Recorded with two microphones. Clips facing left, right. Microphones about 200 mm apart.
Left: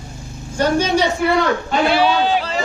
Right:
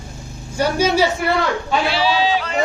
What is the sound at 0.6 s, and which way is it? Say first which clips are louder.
Speech: even; 10° right (ahead or behind).